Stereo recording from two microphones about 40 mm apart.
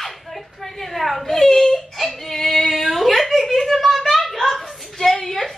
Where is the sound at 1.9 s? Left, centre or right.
Centre.